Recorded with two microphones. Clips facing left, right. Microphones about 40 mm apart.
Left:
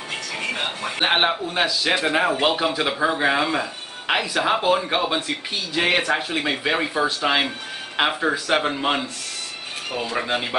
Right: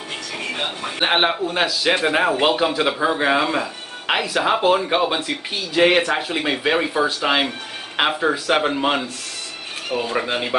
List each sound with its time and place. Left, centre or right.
0.9 s speech: centre
2.5 s speech: centre
10.1 s speech: centre